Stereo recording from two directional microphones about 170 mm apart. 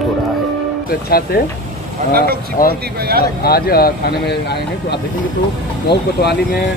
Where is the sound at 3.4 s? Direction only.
65° left (ahead or behind).